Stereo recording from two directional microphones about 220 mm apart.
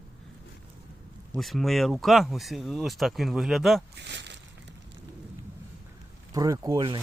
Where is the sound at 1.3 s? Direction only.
Centre (ahead or behind).